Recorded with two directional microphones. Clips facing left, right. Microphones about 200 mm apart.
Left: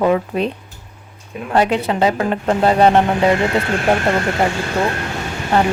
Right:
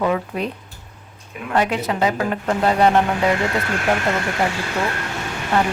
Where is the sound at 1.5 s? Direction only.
30° left (ahead or behind).